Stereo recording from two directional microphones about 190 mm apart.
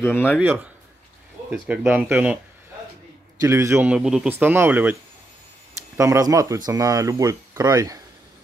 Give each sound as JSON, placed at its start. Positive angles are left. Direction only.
{"t": 0.0, "sound": "speech", "side_deg": 10}
{"t": 1.5, "sound": "speech", "side_deg": -10}
{"t": 3.3, "sound": "speech", "side_deg": -15}
{"t": 5.9, "sound": "speech", "side_deg": -15}